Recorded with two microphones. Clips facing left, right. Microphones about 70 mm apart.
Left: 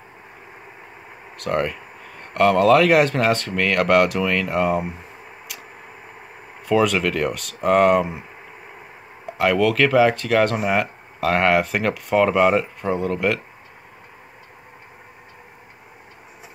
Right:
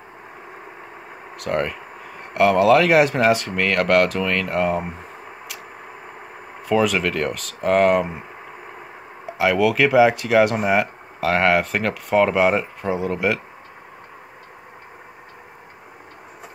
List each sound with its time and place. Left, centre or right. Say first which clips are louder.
1.3 s speech: even; centre
6.7 s speech: left 1 dB; centre